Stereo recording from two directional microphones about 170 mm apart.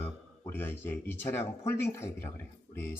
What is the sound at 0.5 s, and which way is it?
Speech, 10° left (ahead or behind).